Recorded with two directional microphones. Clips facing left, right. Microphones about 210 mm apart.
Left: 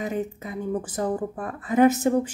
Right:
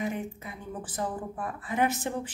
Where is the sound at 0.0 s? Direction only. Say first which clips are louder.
Left 4 dB; 40° left (ahead or behind).